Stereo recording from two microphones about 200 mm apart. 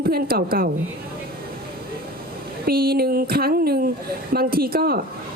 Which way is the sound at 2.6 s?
50° right (ahead or behind).